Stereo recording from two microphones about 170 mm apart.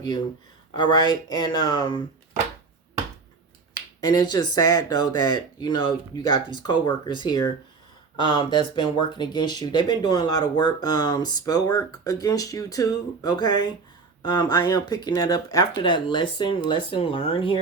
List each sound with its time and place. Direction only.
0.7 s speech: 25° left (ahead or behind)
4.0 s speech: 25° left (ahead or behind)